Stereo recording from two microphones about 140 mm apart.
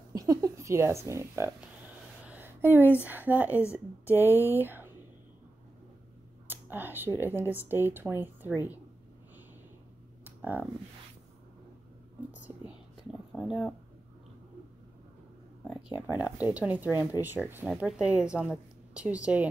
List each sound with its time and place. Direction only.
0.1 s a sound: 25° right (ahead or behind)
3.1 s a woman's voice: 15° right (ahead or behind)
3.4 s speech: 20° left (ahead or behind)
3.7 s a woman's voice: 15° right (ahead or behind)
6.4 s speech: 15° right (ahead or behind)
10.4 s speech: 10° right (ahead or behind)
13.3 s speech: centre (ahead or behind)
16.1 s a woman's voice: 10° right (ahead or behind)